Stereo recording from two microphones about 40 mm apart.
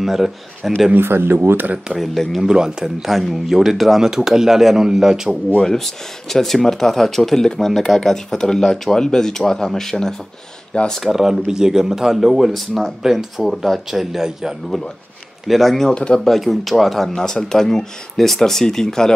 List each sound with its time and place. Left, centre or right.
0.0 s speech: centre
0.9 s speech: right
2.4 s speech: centre
5.6 s speech: centre
11.1 s speech: centre
12.5 s speech: centre
13.0 s speech: centre
14.7 s speech: centre
15.9 s speech: left
16.3 s speech: centre
17.1 s speech: centre